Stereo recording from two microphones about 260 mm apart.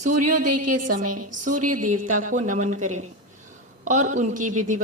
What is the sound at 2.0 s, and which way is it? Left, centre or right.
Speech, right.